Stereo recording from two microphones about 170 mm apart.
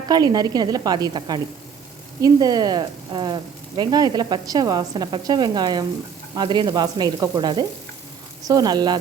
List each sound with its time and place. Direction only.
0.1 s speech: 25° right (ahead or behind)